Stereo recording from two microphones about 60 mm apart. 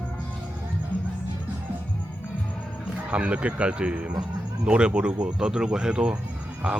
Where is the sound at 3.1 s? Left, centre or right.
Right.